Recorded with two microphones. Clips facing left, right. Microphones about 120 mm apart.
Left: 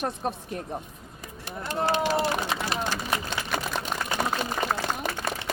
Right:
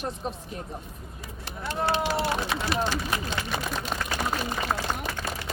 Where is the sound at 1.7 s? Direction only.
45° left (ahead or behind).